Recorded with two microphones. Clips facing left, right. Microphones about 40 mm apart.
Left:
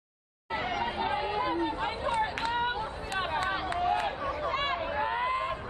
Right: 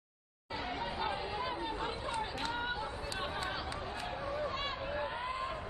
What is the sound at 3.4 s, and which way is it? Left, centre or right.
Run, left.